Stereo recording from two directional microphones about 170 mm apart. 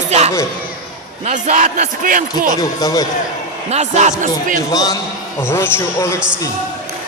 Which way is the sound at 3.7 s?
40° right (ahead or behind).